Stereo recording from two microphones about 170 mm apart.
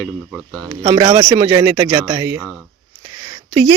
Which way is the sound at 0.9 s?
25° right (ahead or behind).